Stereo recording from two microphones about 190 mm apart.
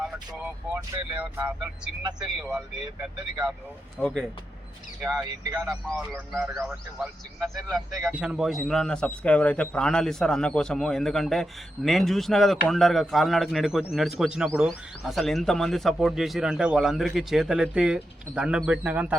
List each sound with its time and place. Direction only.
0.0 s vehicle: 5° right (ahead or behind)
0.8 s a man's voice: 10° right (ahead or behind)
3.9 s a man's voice: 5° left (ahead or behind)
5.2 s speech: 20° right (ahead or behind)
5.6 s a man's voice: centre (ahead or behind)
6.1 s a man's voice: 10° right (ahead or behind)